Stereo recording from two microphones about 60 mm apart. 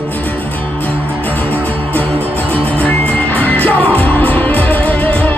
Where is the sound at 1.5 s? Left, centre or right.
Left.